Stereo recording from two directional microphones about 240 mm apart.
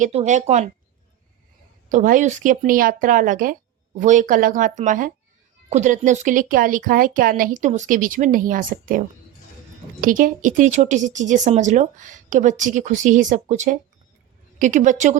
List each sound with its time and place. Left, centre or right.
0.0 s speech: right
1.9 s speech: right